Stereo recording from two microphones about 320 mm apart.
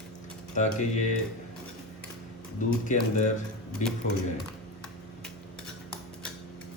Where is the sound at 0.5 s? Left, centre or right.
Left.